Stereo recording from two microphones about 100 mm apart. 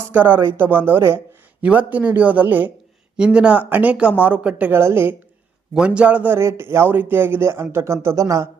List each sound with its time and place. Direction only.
0.1 s a man's voice: 15° right (ahead or behind)
5.7 s a man's voice: 10° right (ahead or behind); by 8.4 s 30° right (ahead or behind)